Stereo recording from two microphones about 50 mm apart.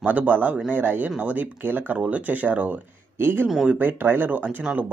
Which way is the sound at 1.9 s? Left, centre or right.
Right.